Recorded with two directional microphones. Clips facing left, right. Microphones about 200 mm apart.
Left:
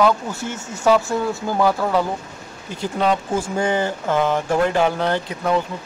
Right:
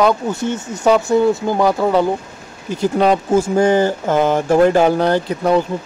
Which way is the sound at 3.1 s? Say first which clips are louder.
Right 4 dB; 40° right (ahead or behind).